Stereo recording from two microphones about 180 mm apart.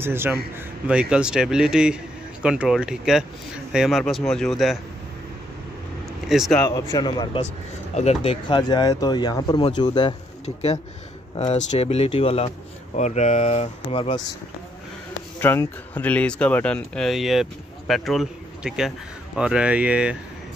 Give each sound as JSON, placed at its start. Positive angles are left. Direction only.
{"t": 0.0, "sound": "a man's voice", "side_deg": -10}
{"t": 6.0, "sound": "vehicle", "side_deg": 0}
{"t": 6.6, "sound": "speech", "side_deg": 20}
{"t": 7.9, "sound": "speech", "side_deg": 35}
{"t": 10.4, "sound": "speech", "side_deg": 35}
{"t": 15.4, "sound": "speech", "side_deg": 10}